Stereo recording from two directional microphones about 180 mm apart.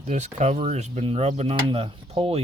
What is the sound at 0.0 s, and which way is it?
Speech, 40° right (ahead or behind).